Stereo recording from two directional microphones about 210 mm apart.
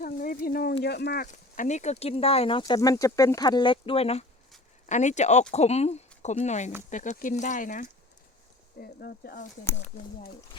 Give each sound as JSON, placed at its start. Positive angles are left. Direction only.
{"t": 0.0, "sound": "speech", "side_deg": 40}
{"t": 1.3, "sound": "speech", "side_deg": 35}